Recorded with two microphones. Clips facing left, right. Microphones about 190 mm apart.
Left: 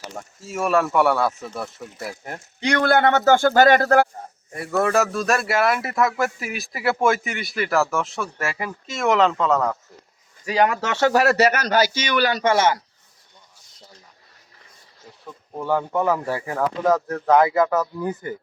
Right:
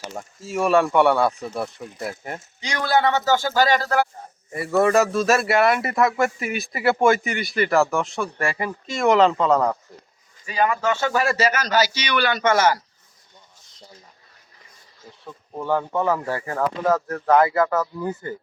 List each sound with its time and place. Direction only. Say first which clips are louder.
0.1 s speech: right 4 dB; 5° right (ahead or behind)
2.6 s speech: left 3 dB; 60° left (ahead or behind)
4.5 s speech: right 2 dB; centre (ahead or behind)
10.4 s speech: left 1 dB; 75° left (ahead or behind); by 12.8 s 25° left (ahead or behind)
15.6 s speech: left 1 dB; 10° left (ahead or behind)